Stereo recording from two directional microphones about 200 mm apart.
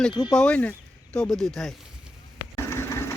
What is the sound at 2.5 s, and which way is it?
Engine, 15° left (ahead or behind).